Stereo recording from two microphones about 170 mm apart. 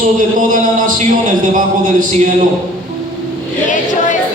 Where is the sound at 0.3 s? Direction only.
50° right (ahead or behind).